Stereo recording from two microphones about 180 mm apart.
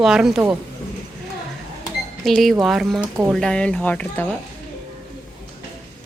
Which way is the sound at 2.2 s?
Centre (ahead or behind).